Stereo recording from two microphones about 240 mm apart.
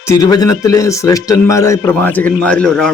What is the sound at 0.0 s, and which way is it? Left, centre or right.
Speech, centre.